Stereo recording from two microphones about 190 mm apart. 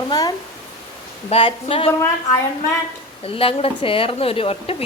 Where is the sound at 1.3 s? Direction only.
30° left (ahead or behind).